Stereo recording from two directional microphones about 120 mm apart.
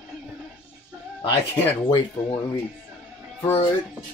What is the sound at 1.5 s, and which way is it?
Speech, 15° left (ahead or behind).